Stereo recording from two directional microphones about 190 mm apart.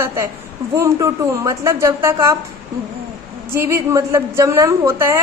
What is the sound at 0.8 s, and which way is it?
A woman's voice, 15° right (ahead or behind).